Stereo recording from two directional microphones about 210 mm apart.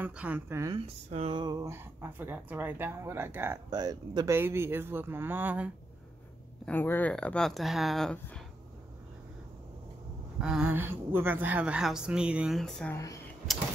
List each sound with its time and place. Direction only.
0.0 s speech: 5° right (ahead or behind)
0.7 s speech: 25° right (ahead or behind); by 5.7 s 10° right (ahead or behind)
6.6 s a woman's voice: 10° left (ahead or behind)
10.4 s a woman's voice: 5° right (ahead or behind)
12.9 s speech: 15° left (ahead or behind)